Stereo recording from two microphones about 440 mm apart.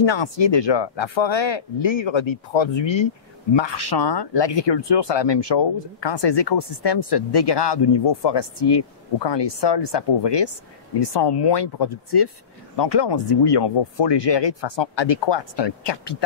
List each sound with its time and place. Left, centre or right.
0.0 s speech: left
3.5 s speech: left